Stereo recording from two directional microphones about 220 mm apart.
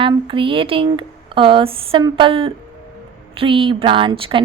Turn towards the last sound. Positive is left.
turn(degrees=-25)  # may be behind; listen again after turning